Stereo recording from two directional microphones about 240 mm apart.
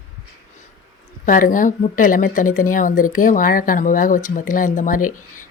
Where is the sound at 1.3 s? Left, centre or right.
Left.